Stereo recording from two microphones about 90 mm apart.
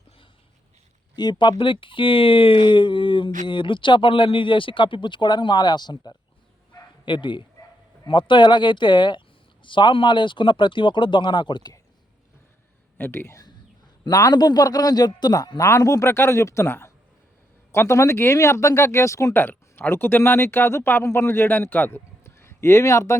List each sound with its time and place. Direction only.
1.1 s speech: 55° left (ahead or behind)
13.0 s speech: 25° left (ahead or behind)
14.1 s a man's voice: 45° left (ahead or behind)